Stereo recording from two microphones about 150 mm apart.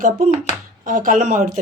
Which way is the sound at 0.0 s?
60° right (ahead or behind).